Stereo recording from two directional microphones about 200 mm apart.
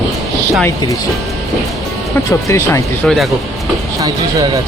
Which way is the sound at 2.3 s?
15° left (ahead or behind).